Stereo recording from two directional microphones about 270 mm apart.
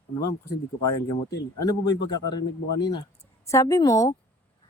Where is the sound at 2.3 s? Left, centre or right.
Centre.